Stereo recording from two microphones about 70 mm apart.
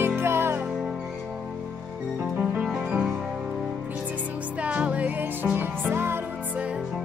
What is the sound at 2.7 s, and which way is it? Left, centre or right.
Music, right.